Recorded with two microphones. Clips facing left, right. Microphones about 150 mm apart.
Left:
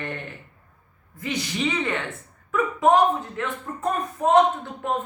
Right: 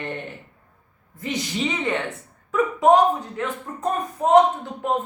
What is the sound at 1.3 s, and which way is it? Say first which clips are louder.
Speech: right 1 dB; 20° right (ahead or behind).